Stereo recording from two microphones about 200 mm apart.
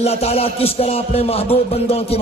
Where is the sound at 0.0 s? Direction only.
30° left (ahead or behind).